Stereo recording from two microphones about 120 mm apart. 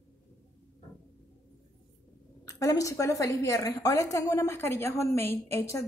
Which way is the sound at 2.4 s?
25° left (ahead or behind).